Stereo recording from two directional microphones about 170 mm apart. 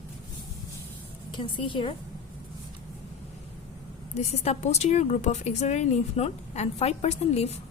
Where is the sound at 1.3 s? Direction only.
30° left (ahead or behind).